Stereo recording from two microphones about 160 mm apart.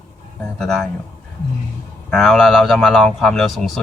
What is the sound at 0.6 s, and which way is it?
Speech, 5° left (ahead or behind).